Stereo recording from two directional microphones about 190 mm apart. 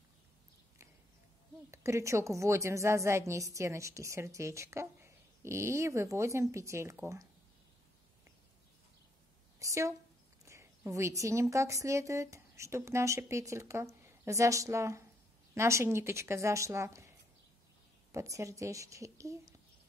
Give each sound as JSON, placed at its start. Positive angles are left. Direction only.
{"t": 1.7, "sound": "a woman's voice", "side_deg": -15}
{"t": 9.6, "sound": "a woman's voice", "side_deg": -15}
{"t": 18.1, "sound": "a woman's voice", "side_deg": -15}